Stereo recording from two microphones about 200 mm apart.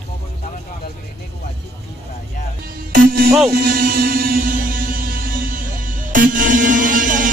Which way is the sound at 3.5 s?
45° right (ahead or behind).